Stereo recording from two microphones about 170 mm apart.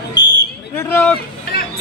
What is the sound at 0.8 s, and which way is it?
Speech, 10° left (ahead or behind).